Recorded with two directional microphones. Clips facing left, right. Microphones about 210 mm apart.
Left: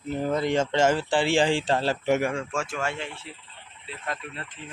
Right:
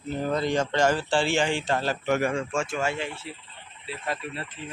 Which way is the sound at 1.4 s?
30° left (ahead or behind).